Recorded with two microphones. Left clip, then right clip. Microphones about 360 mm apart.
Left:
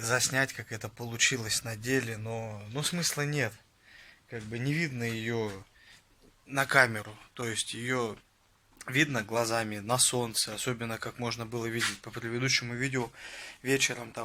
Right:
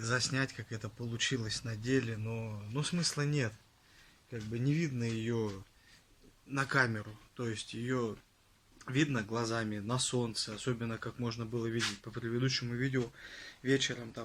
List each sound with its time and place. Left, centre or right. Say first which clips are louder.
0.0 s speech: left 6 dB; centre
6.5 s speech: left 7 dB; centre